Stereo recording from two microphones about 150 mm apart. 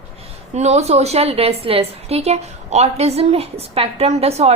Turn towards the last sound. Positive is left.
turn(degrees=-45)  # may be behind; listen again after turning